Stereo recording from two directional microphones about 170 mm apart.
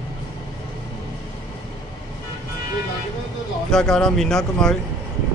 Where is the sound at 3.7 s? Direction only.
5° left (ahead or behind).